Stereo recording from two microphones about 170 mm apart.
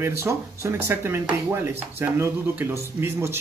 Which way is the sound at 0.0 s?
15° right (ahead or behind).